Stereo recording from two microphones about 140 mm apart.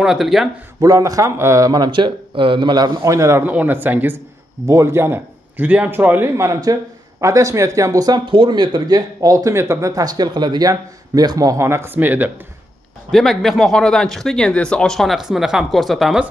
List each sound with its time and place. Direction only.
0.0 s speech: 5° right (ahead or behind)
0.7 s a man's voice: 25° right (ahead or behind)
13.1 s speech: centre (ahead or behind)